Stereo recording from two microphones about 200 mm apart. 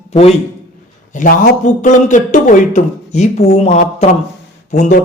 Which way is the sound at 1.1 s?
40° left (ahead or behind).